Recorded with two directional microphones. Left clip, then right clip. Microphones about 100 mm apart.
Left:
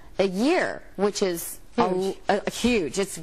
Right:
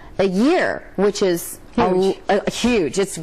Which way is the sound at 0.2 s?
Centre (ahead or behind).